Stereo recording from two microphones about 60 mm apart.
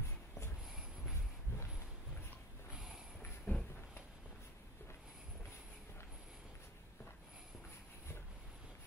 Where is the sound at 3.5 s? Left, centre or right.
Left.